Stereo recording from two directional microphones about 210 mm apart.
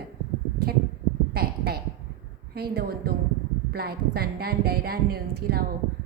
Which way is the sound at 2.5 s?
50° right (ahead or behind).